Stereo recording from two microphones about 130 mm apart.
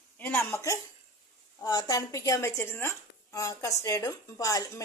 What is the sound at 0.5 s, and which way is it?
A woman's voice, 25° left (ahead or behind).